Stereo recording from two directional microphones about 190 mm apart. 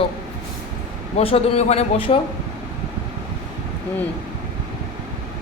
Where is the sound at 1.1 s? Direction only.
30° left (ahead or behind).